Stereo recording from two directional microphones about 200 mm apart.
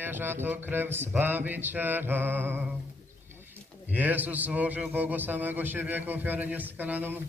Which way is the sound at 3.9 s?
10° right (ahead or behind).